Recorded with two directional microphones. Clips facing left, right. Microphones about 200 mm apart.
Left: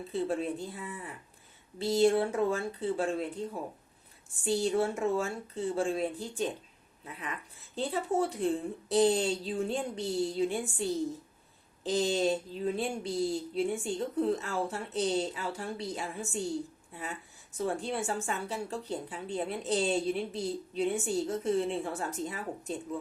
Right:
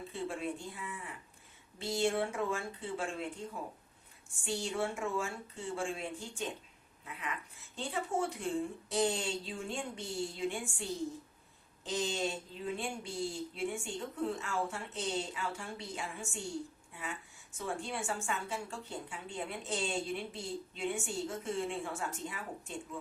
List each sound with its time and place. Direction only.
0.1 s a woman's voice: 35° left (ahead or behind)